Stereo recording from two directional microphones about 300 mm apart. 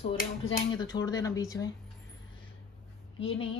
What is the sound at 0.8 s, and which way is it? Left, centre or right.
Speech, centre.